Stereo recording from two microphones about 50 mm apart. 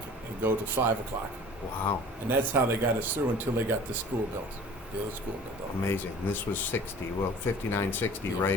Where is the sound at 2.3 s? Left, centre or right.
Right.